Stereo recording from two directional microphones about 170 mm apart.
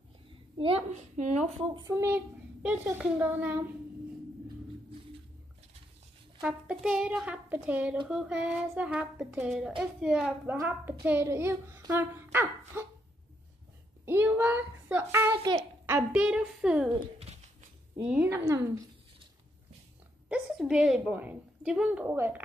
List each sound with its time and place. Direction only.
0.6 s a woman's voice: 35° right (ahead or behind)
1.7 s a woman's voice: 20° right (ahead or behind)
6.4 s a woman's voice: 5° right (ahead or behind)
14.0 s a woman's voice: 10° right (ahead or behind)
15.4 s a child's voice: 25° right (ahead or behind)
15.9 s a woman's voice: 5° right (ahead or behind)
18.0 s speech: 5° right (ahead or behind)
18.3 s a woman's voice: 15° right (ahead or behind)
20.2 s a woman's voice: 5° right (ahead or behind)